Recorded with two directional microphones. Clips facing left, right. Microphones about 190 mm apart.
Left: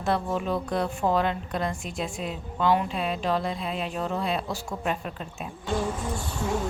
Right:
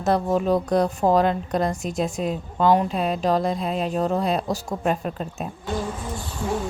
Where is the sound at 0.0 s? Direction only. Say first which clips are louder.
Right 6 dB; 40° right (ahead or behind).